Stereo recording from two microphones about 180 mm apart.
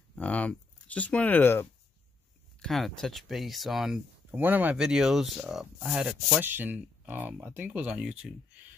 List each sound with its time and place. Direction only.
0.1 s speech: 5° left (ahead or behind)